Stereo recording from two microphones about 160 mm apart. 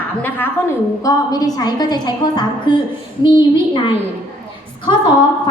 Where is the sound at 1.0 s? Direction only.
25° left (ahead or behind).